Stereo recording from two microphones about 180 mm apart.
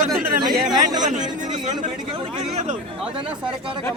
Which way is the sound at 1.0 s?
45° right (ahead or behind).